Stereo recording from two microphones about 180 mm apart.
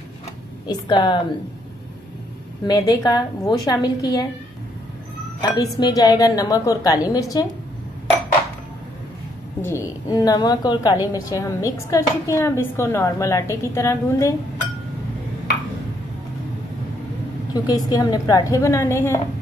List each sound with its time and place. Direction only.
0.7 s a woman's voice: 25° left (ahead or behind)
2.6 s a woman's voice: 20° left (ahead or behind)
5.4 s a woman's voice: 20° left (ahead or behind)
9.6 s a woman's voice: 15° left (ahead or behind)
17.6 s a woman's voice: 20° left (ahead or behind)